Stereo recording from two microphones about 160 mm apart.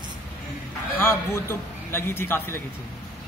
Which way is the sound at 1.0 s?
15° left (ahead or behind).